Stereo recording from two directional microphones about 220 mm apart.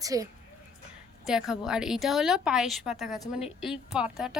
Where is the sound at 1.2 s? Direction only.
Centre (ahead or behind).